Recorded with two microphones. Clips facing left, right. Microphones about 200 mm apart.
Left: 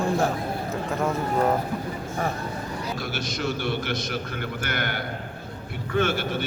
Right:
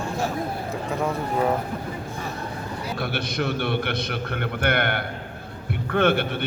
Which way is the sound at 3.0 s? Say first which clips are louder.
Right 3 dB; 60° right (ahead or behind).